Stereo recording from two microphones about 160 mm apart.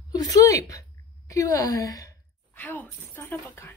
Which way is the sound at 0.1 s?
20° left (ahead or behind).